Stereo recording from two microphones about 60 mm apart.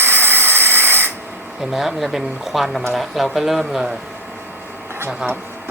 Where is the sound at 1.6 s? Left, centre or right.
Centre.